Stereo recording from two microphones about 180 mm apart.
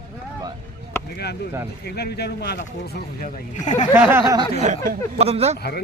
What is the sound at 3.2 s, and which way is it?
Speech, 45° left (ahead or behind).